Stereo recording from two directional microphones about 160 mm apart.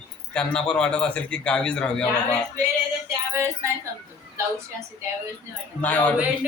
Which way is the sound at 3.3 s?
15° right (ahead or behind).